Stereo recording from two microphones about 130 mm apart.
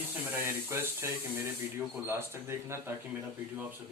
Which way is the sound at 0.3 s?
20° right (ahead or behind).